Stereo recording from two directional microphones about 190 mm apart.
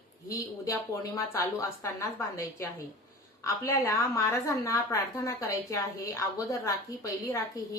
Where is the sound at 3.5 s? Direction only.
15° left (ahead or behind).